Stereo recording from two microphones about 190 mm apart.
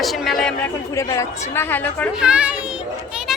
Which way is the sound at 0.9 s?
15° left (ahead or behind).